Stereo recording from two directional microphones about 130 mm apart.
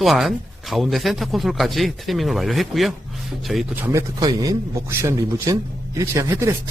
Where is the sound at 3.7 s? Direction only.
15° right (ahead or behind).